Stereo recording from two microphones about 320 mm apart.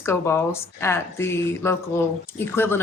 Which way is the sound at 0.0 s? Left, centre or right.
Centre.